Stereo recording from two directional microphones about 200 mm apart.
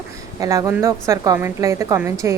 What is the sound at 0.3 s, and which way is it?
A woman's voice, 15° right (ahead or behind).